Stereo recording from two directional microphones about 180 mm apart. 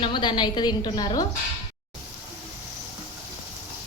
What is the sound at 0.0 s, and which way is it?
A woman's voice, 25° left (ahead or behind).